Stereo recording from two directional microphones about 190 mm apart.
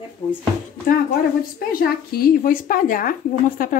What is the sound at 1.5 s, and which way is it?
A woman's voice, 50° left (ahead or behind).